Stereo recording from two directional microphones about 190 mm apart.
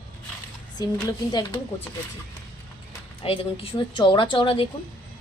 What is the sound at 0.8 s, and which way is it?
Speech, 20° left (ahead or behind).